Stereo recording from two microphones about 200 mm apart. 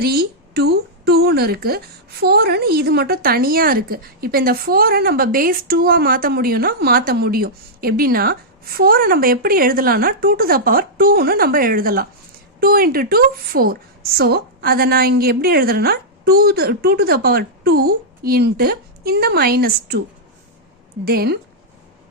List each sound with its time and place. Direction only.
0.0 s a sound: 50° right (ahead or behind)
2.2 s a woman's voice: 55° right (ahead or behind)
21.0 s a woman's voice: 50° right (ahead or behind)